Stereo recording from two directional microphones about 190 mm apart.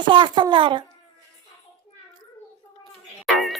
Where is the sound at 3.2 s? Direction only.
Centre (ahead or behind).